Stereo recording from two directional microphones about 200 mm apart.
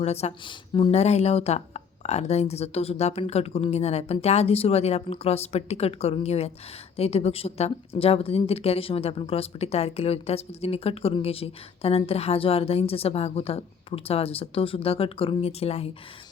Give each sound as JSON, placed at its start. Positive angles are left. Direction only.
{"t": 0.0, "sound": "speech", "side_deg": 30}